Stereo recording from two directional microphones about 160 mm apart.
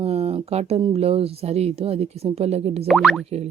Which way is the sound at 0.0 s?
35° right (ahead or behind).